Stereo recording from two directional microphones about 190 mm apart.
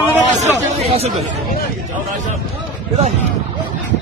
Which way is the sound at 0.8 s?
35° right (ahead or behind).